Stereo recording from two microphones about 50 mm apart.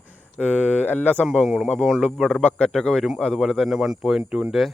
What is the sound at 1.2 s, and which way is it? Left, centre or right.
Speech, centre.